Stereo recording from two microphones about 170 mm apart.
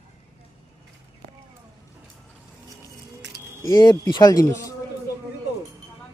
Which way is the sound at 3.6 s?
20° left (ahead or behind).